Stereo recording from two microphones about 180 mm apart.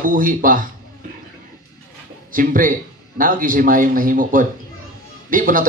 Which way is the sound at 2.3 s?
50° right (ahead or behind).